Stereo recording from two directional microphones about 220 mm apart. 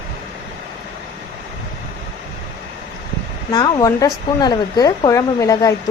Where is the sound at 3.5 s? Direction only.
20° left (ahead or behind).